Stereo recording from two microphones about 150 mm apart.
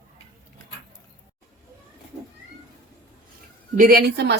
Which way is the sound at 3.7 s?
75° right (ahead or behind).